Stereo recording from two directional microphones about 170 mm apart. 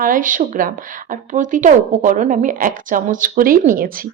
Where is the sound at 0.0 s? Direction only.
50° right (ahead or behind).